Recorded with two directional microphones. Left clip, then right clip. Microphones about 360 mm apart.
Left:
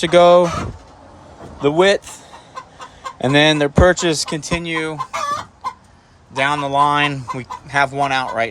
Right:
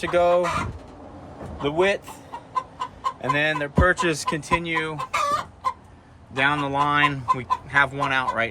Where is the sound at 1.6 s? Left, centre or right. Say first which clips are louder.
Left 8 dB; left.